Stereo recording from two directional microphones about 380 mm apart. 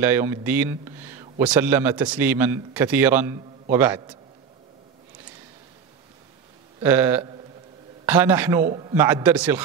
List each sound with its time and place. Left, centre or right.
0.0 s a man's voice: centre
6.8 s a man's voice: centre